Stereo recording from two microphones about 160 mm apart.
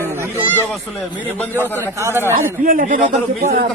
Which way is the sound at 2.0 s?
15° right (ahead or behind).